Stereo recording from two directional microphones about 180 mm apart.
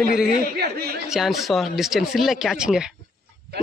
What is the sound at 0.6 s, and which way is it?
Speech, 60° right (ahead or behind).